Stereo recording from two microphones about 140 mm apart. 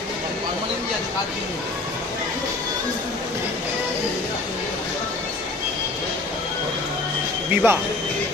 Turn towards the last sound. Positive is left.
turn(degrees=-15)  # may be behind; listen again after turning